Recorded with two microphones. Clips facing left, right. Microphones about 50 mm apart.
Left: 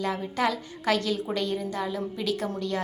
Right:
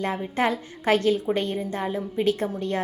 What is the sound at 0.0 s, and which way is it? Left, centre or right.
A woman's voice, right.